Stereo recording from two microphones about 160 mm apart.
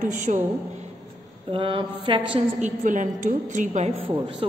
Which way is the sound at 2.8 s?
55° right (ahead or behind).